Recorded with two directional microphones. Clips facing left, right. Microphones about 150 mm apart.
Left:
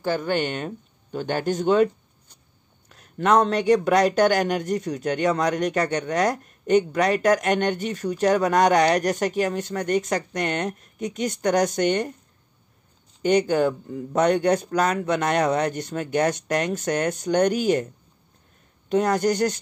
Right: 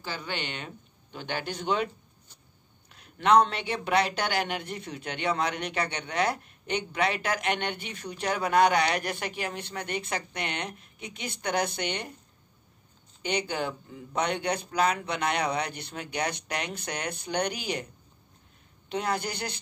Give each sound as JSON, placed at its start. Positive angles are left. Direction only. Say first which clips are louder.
{"t": 0.0, "sound": "speech", "louder": "left 12 dB", "side_deg": 50}
{"t": 2.9, "sound": "speech", "louder": "left 2 dB", "side_deg": 45}
{"t": 13.2, "sound": "speech", "louder": "left 11 dB", "side_deg": 45}
{"t": 18.9, "sound": "speech", "louder": "left 10 dB", "side_deg": 45}